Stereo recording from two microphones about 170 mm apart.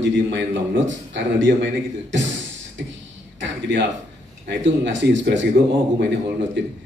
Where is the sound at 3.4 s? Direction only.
90° right.